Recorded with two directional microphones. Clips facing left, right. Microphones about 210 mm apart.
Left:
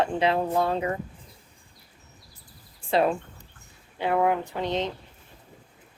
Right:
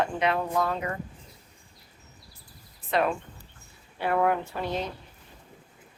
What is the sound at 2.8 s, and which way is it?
Speech, 30° left (ahead or behind).